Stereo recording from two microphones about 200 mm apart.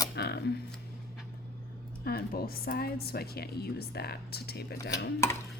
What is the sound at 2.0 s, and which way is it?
Speech, 50° left (ahead or behind).